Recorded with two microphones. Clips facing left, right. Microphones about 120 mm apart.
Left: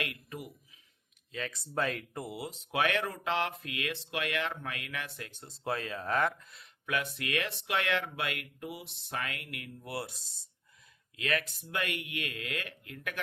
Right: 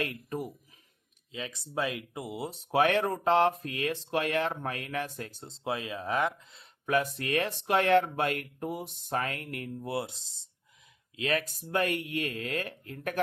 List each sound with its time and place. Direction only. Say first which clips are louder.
0.0 s speech: right 6 dB; 40° right (ahead or behind)
1.3 s speech: even; 15° right (ahead or behind)
2.4 s speech: right 6 dB; 35° right (ahead or behind)
5.5 s speech: right 1 dB; 20° right (ahead or behind)
6.5 s speech: right 7 dB; 30° right (ahead or behind)